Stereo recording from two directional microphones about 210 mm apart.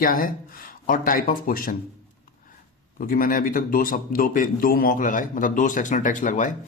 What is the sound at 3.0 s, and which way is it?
A man's voice, 40° left (ahead or behind).